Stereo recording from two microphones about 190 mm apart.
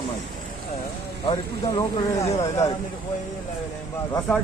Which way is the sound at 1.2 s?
25° left (ahead or behind).